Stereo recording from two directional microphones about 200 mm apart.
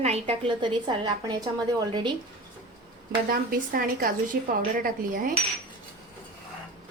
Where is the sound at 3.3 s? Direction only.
45° right (ahead or behind).